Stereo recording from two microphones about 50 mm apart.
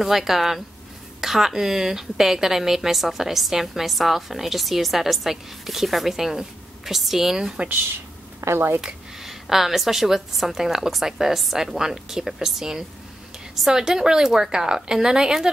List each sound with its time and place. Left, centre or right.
0.0 s a woman's voice: centre
8.4 s speech: right
8.8 s a woman's voice: centre